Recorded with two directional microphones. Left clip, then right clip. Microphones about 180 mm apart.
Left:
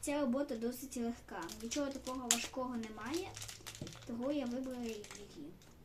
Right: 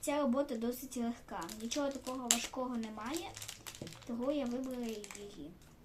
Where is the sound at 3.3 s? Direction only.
25° right (ahead or behind).